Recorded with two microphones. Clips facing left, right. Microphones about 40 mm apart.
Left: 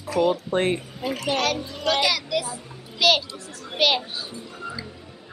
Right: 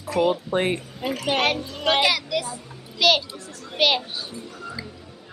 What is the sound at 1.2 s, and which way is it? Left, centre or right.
Speech, right.